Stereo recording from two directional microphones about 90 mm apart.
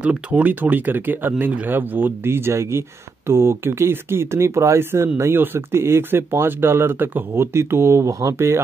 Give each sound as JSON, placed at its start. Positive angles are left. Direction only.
{"t": 0.0, "sound": "speech", "side_deg": -15}